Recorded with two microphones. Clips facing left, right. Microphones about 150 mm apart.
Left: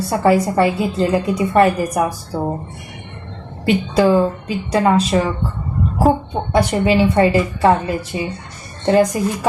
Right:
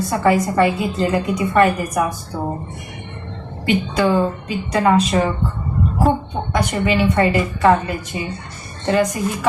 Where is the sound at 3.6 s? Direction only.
35° left (ahead or behind).